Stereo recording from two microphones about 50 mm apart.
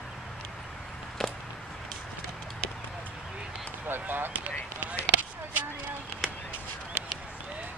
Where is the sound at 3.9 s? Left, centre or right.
Right.